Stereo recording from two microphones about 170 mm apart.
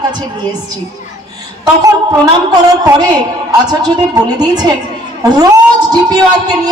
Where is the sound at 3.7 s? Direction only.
25° right (ahead or behind).